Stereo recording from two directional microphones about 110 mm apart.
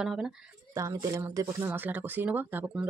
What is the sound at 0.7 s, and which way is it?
Speech, 30° right (ahead or behind).